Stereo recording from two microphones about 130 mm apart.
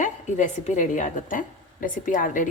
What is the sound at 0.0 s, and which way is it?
A woman's voice, 70° left (ahead or behind).